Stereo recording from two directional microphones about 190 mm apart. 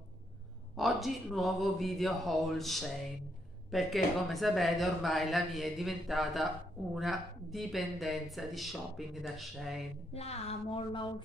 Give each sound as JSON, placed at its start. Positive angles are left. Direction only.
{"t": 0.7, "sound": "speech", "side_deg": 0}
{"t": 10.1, "sound": "speech", "side_deg": 35}